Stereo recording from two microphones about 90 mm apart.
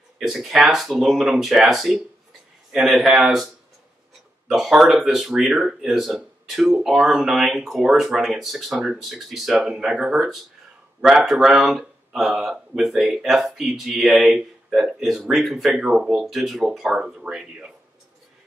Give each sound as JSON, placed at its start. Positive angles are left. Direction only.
{"t": 0.2, "sound": "speech", "side_deg": -5}
{"t": 4.5, "sound": "speech", "side_deg": -5}